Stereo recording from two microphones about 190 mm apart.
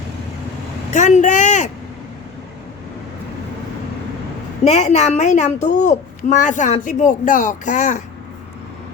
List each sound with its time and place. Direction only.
0.9 s a child's voice: 40° left (ahead or behind)
4.6 s a child's voice: 35° left (ahead or behind)